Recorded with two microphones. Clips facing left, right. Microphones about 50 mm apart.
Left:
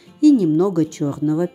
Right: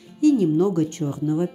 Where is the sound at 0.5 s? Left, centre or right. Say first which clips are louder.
Left 3 dB; left.